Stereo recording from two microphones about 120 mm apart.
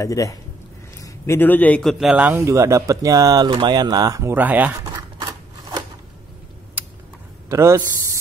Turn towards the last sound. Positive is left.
turn(degrees=-25)  # may be behind; listen again after turning